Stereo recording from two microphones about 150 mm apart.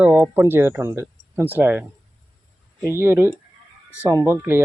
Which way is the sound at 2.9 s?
15° right (ahead or behind).